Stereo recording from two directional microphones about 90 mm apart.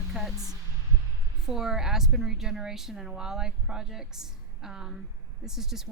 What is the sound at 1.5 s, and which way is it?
A woman's voice, 5° right (ahead or behind).